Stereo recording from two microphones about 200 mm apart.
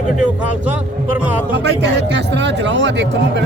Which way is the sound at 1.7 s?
60° right (ahead or behind).